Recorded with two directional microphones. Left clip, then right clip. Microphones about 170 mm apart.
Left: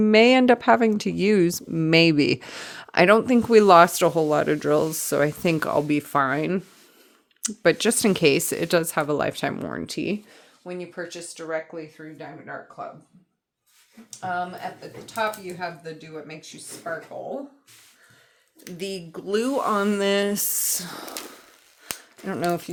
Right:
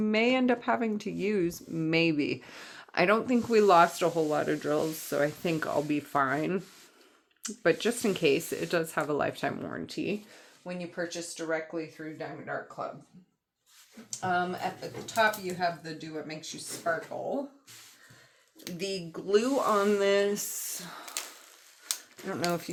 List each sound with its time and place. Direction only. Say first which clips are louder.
0.0 s speech: left 10 dB; 90° left; by 6.6 s 65° left (ahead or behind)
7.4 s speech: left 7 dB; 75° left (ahead or behind)
12.0 s speech: even; 55° left (ahead or behind)
14.2 s speech: left 1 dB; 30° left (ahead or behind)
18.8 s speech: left 3 dB; 65° left (ahead or behind); by 21.1 s 90° left
22.4 s speech: left 6 dB; 55° left (ahead or behind)